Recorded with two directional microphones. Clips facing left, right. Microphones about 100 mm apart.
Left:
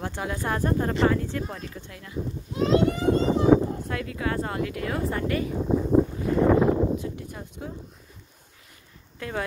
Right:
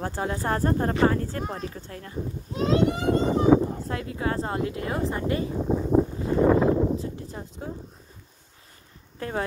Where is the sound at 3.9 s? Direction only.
30° right (ahead or behind).